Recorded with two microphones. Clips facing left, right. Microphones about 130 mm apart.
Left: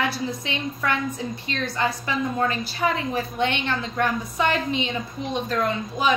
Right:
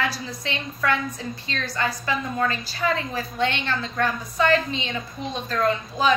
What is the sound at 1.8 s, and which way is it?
A woman's voice, 20° left (ahead or behind).